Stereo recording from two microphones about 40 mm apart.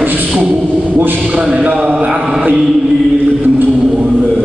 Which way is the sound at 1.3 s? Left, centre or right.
Right.